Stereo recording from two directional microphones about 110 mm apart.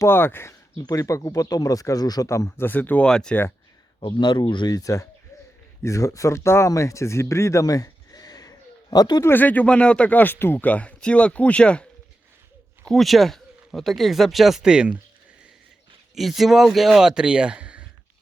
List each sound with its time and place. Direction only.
0.0 s speech: 20° left (ahead or behind)
0.8 s speech: 30° left (ahead or behind); by 3.3 s 5° left (ahead or behind)
4.0 s speech: 45° left (ahead or behind)
9.2 s speech: 15° left (ahead or behind)
12.9 s speech: centre (ahead or behind)
16.1 s speech: centre (ahead or behind)